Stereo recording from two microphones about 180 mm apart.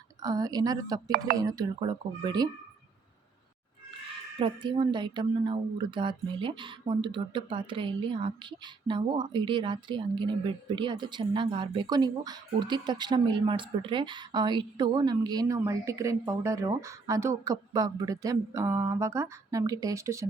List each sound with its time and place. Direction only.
0.2 s speech: 20° right (ahead or behind)
4.4 s speech: 30° right (ahead or behind)